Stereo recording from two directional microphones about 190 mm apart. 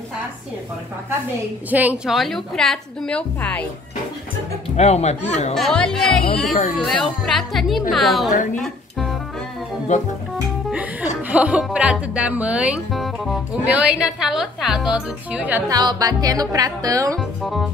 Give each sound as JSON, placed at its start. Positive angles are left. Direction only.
{"t": 1.7, "sound": "speech", "side_deg": -10}
{"t": 4.7, "sound": "speech", "side_deg": 35}
{"t": 5.5, "sound": "speech", "side_deg": 5}
{"t": 9.9, "sound": "speech", "side_deg": 40}
{"t": 10.7, "sound": "speech", "side_deg": -10}
{"t": 15.7, "sound": "speech", "side_deg": -20}
{"t": 17.4, "sound": "speech", "side_deg": 0}